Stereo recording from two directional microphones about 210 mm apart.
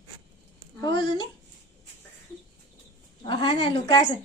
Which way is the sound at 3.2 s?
25° left (ahead or behind).